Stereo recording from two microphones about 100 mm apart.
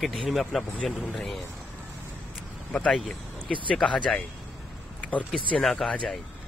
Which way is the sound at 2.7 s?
5° left (ahead or behind).